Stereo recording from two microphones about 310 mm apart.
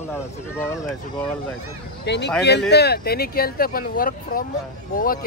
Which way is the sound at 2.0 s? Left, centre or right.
Left.